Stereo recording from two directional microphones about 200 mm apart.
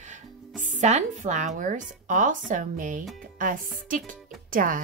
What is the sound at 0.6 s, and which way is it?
Speech, 40° right (ahead or behind).